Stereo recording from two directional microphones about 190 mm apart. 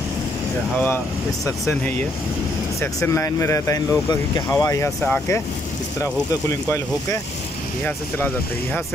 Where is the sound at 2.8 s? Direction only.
15° left (ahead or behind).